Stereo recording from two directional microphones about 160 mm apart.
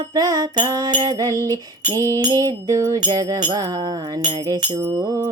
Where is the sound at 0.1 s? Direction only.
25° right (ahead or behind).